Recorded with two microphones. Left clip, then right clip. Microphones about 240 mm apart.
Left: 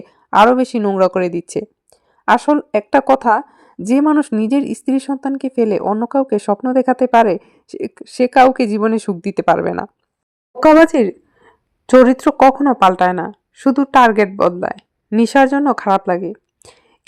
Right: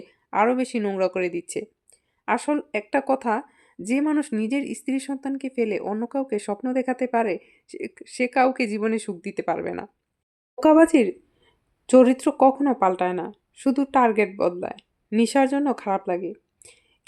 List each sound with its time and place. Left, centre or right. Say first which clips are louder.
0.1 s speech: left 11 dB; left